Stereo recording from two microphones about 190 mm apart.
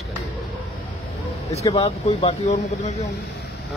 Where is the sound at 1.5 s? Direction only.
35° left (ahead or behind).